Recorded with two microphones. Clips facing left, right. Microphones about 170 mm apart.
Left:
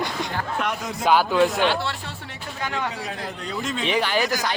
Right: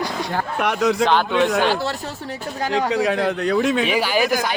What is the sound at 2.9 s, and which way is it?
Speech, 90° right.